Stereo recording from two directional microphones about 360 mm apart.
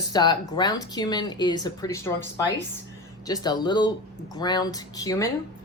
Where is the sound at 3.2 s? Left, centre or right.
Centre.